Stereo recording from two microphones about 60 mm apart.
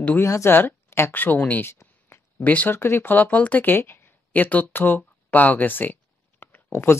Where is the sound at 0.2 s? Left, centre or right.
Left.